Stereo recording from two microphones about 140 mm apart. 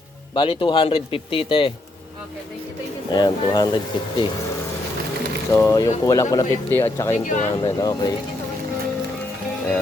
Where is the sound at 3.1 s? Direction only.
30° left (ahead or behind).